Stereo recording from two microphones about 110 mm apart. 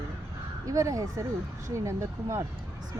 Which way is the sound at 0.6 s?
30° right (ahead or behind).